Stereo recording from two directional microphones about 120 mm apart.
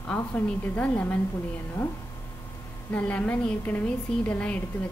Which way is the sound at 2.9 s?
10° left (ahead or behind).